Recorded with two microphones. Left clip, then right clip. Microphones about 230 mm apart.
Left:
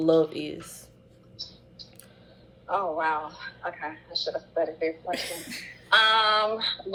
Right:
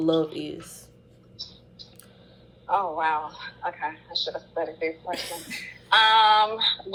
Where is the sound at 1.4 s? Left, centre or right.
Centre.